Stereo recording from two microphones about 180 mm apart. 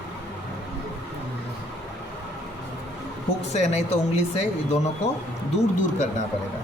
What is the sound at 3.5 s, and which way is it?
Speech, 35° left (ahead or behind).